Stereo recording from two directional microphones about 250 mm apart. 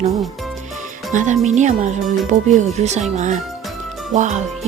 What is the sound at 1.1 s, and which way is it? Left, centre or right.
A woman's voice, right.